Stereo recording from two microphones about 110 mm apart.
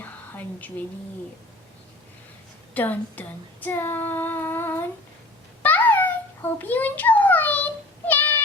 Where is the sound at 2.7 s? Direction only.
15° left (ahead or behind).